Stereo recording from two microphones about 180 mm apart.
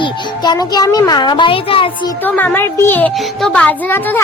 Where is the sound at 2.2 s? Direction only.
10° left (ahead or behind).